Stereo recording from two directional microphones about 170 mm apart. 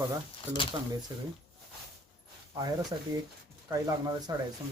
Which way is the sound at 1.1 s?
25° right (ahead or behind).